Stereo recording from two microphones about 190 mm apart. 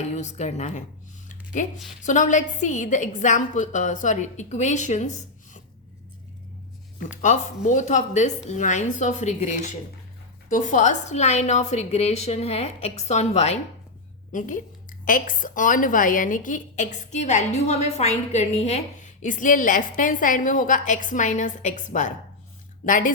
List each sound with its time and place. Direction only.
0.1 s a woman's voice: 35° left (ahead or behind)
2.0 s a woman's voice: 40° left (ahead or behind)
7.1 s a woman's voice: 40° left (ahead or behind)